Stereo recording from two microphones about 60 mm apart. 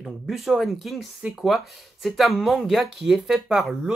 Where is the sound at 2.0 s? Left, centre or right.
Centre.